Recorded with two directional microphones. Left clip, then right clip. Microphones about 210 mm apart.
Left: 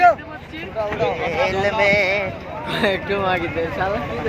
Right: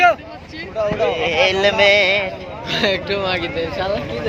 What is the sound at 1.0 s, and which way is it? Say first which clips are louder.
Speech: right 4 dB; 30° right (ahead or behind).